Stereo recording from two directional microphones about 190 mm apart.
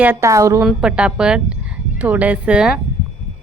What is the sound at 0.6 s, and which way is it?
Speech, 5° right (ahead or behind).